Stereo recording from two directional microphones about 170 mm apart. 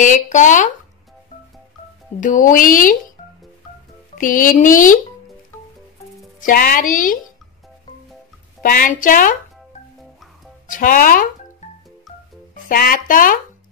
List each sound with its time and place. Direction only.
0.0 s speech: 45° left (ahead or behind)
2.1 s speech: 50° left (ahead or behind)
4.1 s speech: 50° left (ahead or behind)
6.4 s speech: 55° left (ahead or behind)
8.6 s speech: 55° left (ahead or behind)
10.7 s speech: 55° left (ahead or behind)
12.6 s speech: 55° left (ahead or behind)